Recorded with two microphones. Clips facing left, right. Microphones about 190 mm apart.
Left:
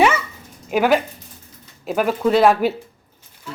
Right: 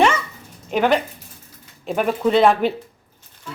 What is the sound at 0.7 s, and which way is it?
Speech, 5° left (ahead or behind).